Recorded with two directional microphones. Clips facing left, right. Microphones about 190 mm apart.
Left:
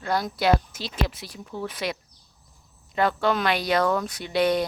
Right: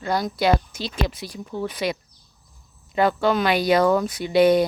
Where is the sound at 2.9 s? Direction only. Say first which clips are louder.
Right 3 dB; centre (ahead or behind).